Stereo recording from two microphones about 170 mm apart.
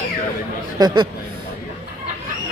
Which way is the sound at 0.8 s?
25° right (ahead or behind).